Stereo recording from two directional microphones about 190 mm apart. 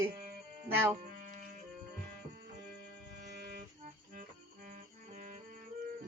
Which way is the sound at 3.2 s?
60° right (ahead or behind).